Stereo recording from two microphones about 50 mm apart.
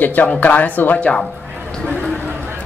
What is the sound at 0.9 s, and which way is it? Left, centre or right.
Speech, left.